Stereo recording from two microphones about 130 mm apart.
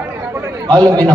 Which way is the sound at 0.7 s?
30° right (ahead or behind).